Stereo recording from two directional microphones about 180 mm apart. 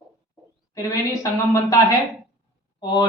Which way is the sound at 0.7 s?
20° left (ahead or behind).